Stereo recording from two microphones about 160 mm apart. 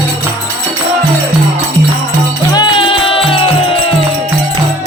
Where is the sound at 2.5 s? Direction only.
30° left (ahead or behind).